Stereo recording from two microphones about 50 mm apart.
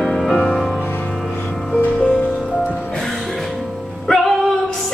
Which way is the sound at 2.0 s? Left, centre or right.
Centre.